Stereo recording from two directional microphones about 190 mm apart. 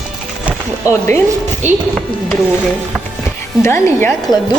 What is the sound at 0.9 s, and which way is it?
Speech, 15° left (ahead or behind).